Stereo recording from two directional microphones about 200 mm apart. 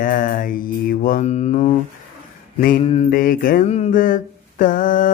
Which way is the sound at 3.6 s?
30° left (ahead or behind).